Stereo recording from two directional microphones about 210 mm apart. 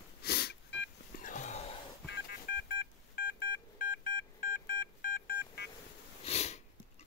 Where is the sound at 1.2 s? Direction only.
35° left (ahead or behind).